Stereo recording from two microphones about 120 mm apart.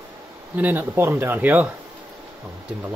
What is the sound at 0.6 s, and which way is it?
Speech, 15° right (ahead or behind).